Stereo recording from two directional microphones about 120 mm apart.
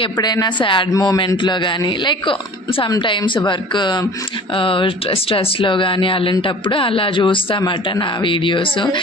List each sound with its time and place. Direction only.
0.0 s a man's voice: 35° left (ahead or behind)